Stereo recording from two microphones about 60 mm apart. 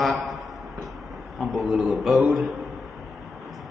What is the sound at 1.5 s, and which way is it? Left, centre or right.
Speech, centre.